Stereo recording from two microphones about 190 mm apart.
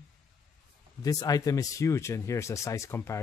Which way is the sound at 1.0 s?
20° left (ahead or behind).